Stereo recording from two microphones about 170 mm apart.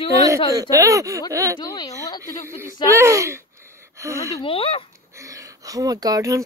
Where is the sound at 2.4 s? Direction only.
15° right (ahead or behind).